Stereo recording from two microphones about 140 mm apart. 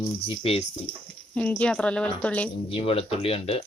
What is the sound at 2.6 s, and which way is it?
Speech, 40° left (ahead or behind).